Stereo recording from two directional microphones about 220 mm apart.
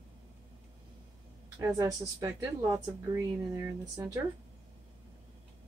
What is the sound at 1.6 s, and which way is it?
Speech, 15° right (ahead or behind).